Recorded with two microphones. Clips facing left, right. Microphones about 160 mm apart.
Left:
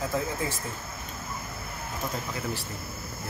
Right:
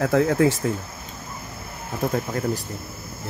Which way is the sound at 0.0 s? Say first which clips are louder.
Right 11 dB; 80° right.